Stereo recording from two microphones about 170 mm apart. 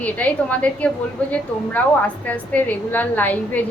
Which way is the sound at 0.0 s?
10° left (ahead or behind).